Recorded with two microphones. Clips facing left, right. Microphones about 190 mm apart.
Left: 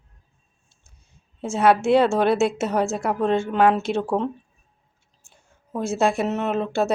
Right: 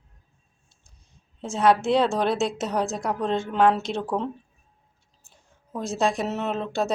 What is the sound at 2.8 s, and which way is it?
Speech, 55° left (ahead or behind).